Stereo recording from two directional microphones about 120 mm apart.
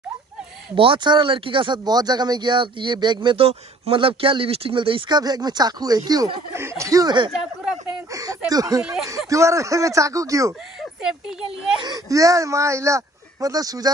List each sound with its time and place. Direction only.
0.7 s speech: 45° right (ahead or behind)
8.1 s a sound: 30° right (ahead or behind)
8.5 s speech: 30° right (ahead or behind)
8.8 s speech: 5° right (ahead or behind)
9.3 s speech: 25° right (ahead or behind)
11.8 s speech: 30° right (ahead or behind)